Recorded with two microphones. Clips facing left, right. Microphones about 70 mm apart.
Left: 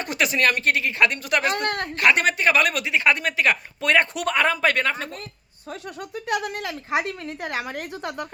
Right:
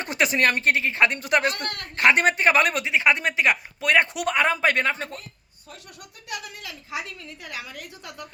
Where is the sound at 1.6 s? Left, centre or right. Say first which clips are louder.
Left 8 dB; left.